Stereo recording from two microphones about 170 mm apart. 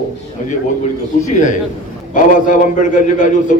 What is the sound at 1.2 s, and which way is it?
A man's voice, 45° left (ahead or behind).